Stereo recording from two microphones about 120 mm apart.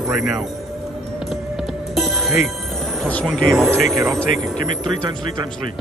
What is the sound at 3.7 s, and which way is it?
Speech, 25° right (ahead or behind).